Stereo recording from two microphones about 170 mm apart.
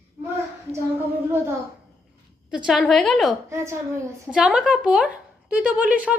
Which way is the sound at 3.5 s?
15° right (ahead or behind).